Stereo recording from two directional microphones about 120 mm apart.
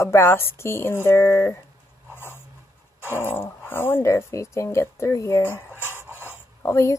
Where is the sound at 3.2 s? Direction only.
20° left (ahead or behind).